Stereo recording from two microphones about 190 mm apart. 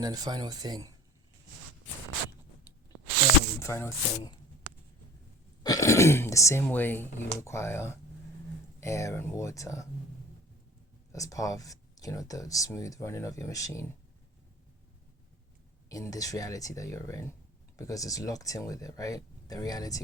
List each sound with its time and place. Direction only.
0.0 s speech: 20° right (ahead or behind)
3.6 s speech: 15° left (ahead or behind)
5.6 s speech: 15° left (ahead or behind)
11.1 s speech: 15° left (ahead or behind)
15.9 s speech: 20° left (ahead or behind)